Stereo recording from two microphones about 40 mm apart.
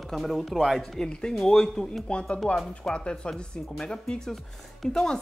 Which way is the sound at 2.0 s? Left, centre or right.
Left.